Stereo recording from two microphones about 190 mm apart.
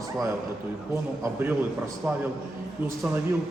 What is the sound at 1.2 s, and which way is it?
A man's voice, 10° right (ahead or behind).